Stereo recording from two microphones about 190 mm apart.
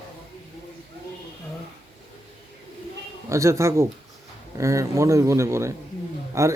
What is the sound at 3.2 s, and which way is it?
Speech, 15° right (ahead or behind).